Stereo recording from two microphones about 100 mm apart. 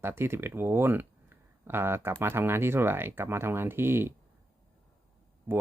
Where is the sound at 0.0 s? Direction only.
25° right (ahead or behind).